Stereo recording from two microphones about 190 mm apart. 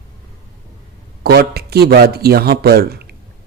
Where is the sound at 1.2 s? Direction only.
55° right (ahead or behind).